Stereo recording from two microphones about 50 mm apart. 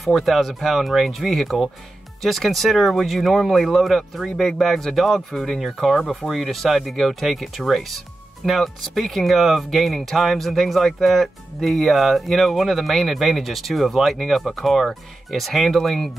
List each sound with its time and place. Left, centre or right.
0.0 s speech: centre